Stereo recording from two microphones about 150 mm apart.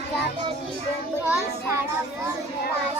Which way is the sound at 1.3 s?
15° right (ahead or behind).